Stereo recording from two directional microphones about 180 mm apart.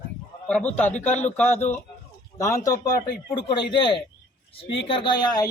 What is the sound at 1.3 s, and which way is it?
A man's voice, 10° left (ahead or behind).